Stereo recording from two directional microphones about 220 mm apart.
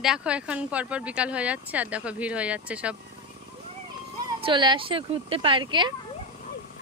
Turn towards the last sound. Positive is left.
turn(degrees=-20)  # may be behind; listen again after turning